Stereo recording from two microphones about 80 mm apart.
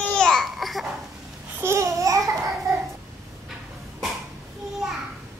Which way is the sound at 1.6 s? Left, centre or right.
Right.